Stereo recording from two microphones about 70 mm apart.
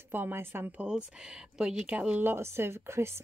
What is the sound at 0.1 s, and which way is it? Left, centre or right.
Speech, right.